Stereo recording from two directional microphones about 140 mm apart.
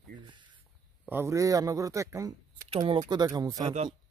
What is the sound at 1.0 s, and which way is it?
Speech, 20° right (ahead or behind).